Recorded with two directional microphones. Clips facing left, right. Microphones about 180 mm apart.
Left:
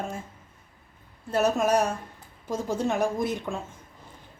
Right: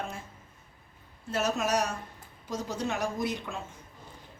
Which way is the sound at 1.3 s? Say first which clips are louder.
Left 6 dB; 55° left (ahead or behind).